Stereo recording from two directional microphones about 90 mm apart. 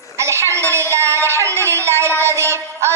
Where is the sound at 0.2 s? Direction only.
30° right (ahead or behind).